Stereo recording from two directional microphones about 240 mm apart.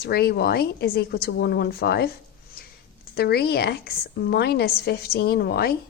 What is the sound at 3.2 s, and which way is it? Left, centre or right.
A woman's voice, left.